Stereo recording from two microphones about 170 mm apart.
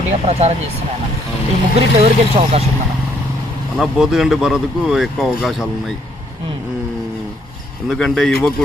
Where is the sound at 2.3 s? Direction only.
35° right (ahead or behind).